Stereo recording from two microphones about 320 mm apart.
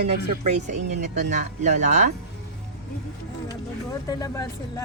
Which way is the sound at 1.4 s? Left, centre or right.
Right.